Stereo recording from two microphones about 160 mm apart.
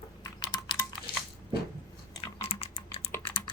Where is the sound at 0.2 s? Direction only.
25° left (ahead or behind).